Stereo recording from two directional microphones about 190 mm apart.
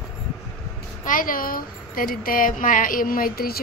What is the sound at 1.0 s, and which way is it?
A woman's voice, 45° left (ahead or behind).